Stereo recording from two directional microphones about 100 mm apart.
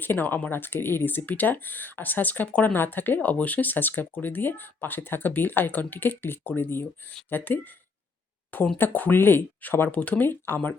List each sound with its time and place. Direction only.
0.0 s speech: 20° left (ahead or behind)
8.8 s speech: 20° left (ahead or behind)